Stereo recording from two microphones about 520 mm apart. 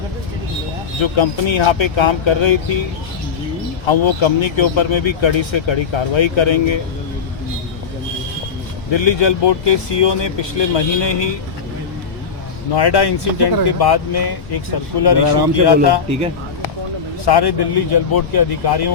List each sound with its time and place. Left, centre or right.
1.0 s speech: left
3.8 s speech: left
8.9 s speech: left
12.7 s speech: left
17.2 s speech: left